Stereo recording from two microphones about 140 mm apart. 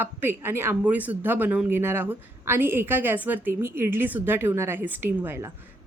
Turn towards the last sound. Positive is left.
turn(degrees=-15)  # may be behind; listen again after turning